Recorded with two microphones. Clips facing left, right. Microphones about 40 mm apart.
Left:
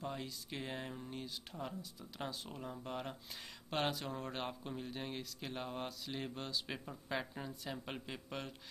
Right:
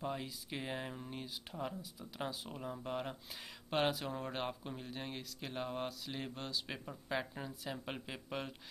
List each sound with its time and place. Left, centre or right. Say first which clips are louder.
0.0 s speech: right 2 dB; centre